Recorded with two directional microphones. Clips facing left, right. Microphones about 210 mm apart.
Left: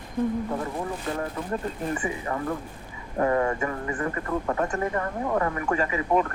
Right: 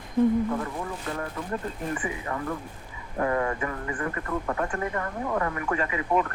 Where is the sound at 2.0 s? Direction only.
25° left (ahead or behind).